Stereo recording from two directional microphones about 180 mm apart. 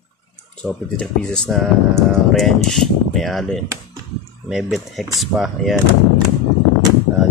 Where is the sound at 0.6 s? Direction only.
5° left (ahead or behind).